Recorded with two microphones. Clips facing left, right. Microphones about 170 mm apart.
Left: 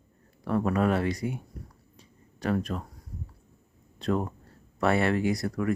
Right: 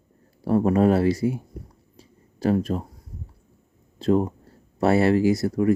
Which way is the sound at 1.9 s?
30° right (ahead or behind).